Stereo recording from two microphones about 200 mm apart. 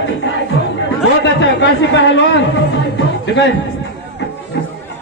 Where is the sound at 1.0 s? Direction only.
60° left (ahead or behind).